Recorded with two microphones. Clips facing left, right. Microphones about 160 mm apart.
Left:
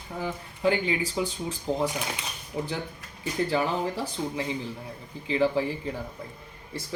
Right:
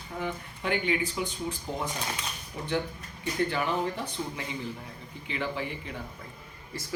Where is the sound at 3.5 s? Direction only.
35° left (ahead or behind).